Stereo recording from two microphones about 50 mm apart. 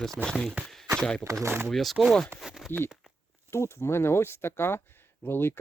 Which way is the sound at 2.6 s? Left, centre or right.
Centre.